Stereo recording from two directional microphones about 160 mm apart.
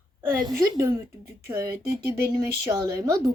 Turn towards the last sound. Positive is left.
turn(degrees=-20)  # may be behind; listen again after turning